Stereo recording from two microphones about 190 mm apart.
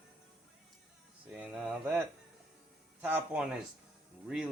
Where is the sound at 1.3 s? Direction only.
5° right (ahead or behind).